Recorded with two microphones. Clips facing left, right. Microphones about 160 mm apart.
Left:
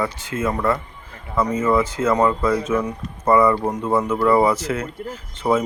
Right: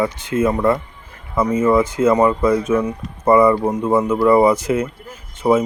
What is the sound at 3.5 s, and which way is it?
Speech, 5° right (ahead or behind).